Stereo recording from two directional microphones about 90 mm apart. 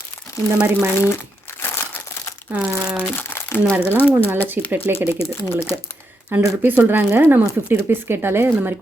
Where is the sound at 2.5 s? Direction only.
15° right (ahead or behind).